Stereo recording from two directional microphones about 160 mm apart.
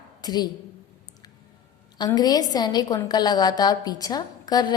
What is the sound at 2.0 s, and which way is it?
A woman's voice, 25° left (ahead or behind).